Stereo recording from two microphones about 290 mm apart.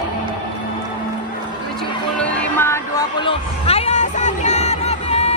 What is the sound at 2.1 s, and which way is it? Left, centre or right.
Music, centre.